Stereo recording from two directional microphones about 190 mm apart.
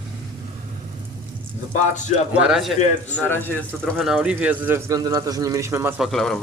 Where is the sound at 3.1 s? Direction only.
10° left (ahead or behind).